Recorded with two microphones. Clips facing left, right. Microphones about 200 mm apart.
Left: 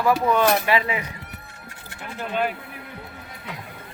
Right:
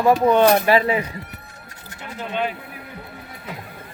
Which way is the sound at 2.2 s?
5° left (ahead or behind).